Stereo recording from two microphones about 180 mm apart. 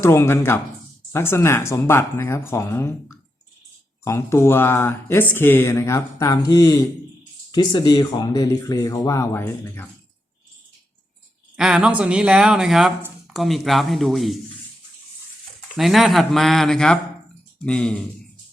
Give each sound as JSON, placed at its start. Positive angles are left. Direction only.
{"t": 0.0, "sound": "speech", "side_deg": 15}
{"t": 11.5, "sound": "speech", "side_deg": -5}
{"t": 15.7, "sound": "speech", "side_deg": 0}